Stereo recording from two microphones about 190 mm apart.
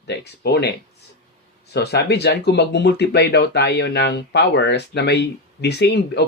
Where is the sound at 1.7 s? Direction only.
60° left (ahead or behind).